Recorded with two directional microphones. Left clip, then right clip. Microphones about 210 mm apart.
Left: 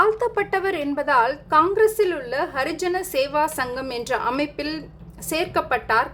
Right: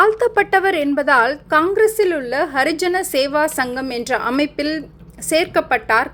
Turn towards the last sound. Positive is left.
turn(degrees=-20)  # may be behind; listen again after turning